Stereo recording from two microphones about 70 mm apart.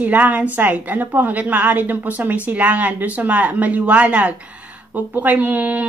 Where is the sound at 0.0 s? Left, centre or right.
Right.